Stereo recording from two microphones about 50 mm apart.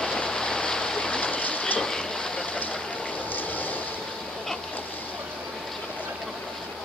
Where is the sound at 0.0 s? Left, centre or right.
Centre.